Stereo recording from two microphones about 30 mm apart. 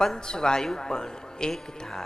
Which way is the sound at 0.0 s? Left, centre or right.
Centre.